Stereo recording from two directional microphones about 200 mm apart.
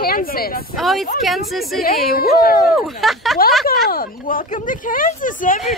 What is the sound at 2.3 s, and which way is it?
Speech, 45° left (ahead or behind).